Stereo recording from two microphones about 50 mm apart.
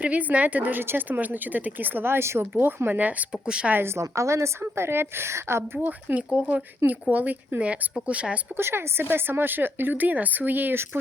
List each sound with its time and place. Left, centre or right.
0.0 s speech: right
0.8 s speech: right
3.4 s speech: centre
3.7 s a woman's voice: right
3.9 s a woman's voice: right
5.7 s speech: right
6.1 s speech: right
8.5 s speech: right